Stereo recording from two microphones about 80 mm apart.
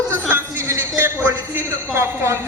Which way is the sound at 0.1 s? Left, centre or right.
Right.